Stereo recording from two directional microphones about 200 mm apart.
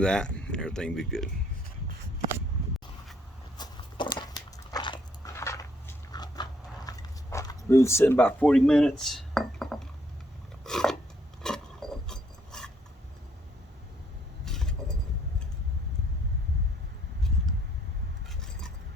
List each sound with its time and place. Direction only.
0.0 s speech: 5° left (ahead or behind)
3.6 s biting: 25° left (ahead or behind)
6.1 s dog: 20° left (ahead or behind); by 9.7 s centre (ahead or behind)
10.6 s a sound: centre (ahead or behind)
14.4 s vehicle: 5° left (ahead or behind)